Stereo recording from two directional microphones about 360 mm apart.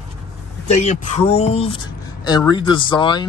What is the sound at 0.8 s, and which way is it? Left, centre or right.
Speech, centre.